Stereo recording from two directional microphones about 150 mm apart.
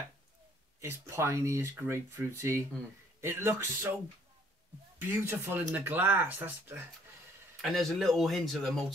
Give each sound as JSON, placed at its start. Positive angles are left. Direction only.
{"t": 0.7, "sound": "speech", "side_deg": -15}
{"t": 4.9, "sound": "speech", "side_deg": -15}
{"t": 7.6, "sound": "speech", "side_deg": 0}